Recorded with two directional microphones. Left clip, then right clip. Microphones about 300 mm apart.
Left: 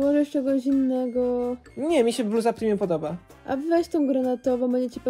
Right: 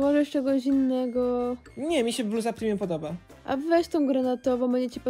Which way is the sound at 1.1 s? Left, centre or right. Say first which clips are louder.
Left 2 dB; right.